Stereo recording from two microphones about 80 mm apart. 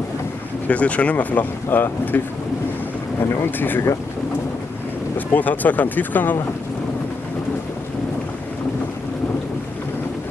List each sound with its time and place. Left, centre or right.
0.7 s speech: centre
3.4 s speech: left
5.1 s speech: left